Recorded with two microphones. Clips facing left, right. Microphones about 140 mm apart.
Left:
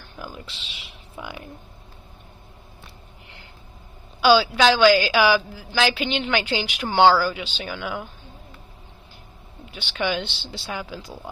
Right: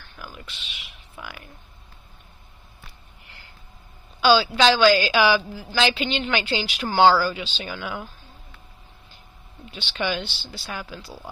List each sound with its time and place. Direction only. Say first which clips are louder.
0.0 s a sound: left 4 dB; 15° left (ahead or behind)
0.5 s speech: left 1 dB; 30° left (ahead or behind)
4.2 s speech: left 1 dB; 10° left (ahead or behind)
7.7 s speech: left 3 dB; centre (ahead or behind)
9.7 s speech: left 1 dB; 10° left (ahead or behind)